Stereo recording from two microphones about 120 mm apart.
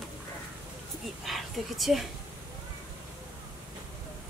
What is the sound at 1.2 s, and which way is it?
Speech, centre (ahead or behind).